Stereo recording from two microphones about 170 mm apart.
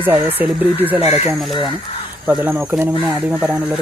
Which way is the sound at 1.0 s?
35° left (ahead or behind).